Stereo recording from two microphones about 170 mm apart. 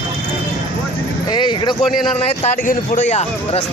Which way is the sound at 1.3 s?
25° left (ahead or behind).